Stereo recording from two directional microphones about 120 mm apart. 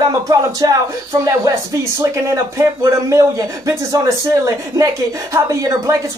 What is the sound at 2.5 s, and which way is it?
Speech, 25° right (ahead or behind).